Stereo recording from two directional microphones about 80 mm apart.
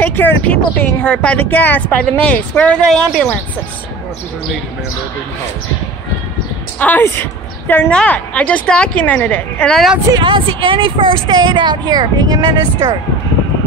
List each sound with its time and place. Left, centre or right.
0.0 s a woman's voice: left
2.9 s a woman's voice: centre
6.8 s a woman's voice: left
7.9 s a woman's voice: centre
10.1 s a woman's voice: right
11.2 s speech: right